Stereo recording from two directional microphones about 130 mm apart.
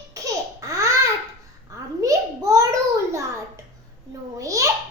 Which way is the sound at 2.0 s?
25° right (ahead or behind).